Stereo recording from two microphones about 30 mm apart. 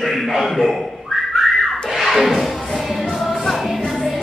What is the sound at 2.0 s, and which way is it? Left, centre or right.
Music, centre.